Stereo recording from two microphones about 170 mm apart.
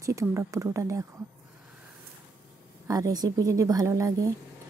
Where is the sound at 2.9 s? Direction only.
20° right (ahead or behind).